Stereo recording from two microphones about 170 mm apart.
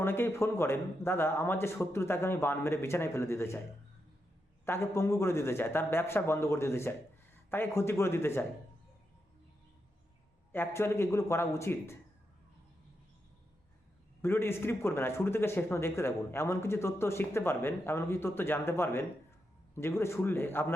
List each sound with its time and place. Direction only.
0.0 s a man's voice: 15° left (ahead or behind)
4.6 s a man's voice: 15° left (ahead or behind)
10.5 s a man's voice: 15° left (ahead or behind)
14.2 s a man's voice: 15° left (ahead or behind)